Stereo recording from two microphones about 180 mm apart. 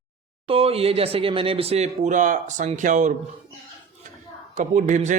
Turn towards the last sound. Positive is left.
turn(degrees=-40)  # may be behind; listen again after turning